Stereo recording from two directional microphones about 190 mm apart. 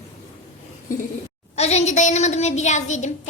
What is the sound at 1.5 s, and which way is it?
A woman's voice, 35° left (ahead or behind).